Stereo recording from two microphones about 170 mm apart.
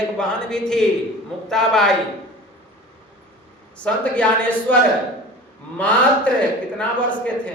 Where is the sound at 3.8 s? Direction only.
5° left (ahead or behind).